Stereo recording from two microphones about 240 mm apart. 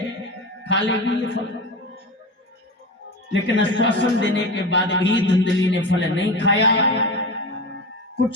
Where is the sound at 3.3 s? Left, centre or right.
Left.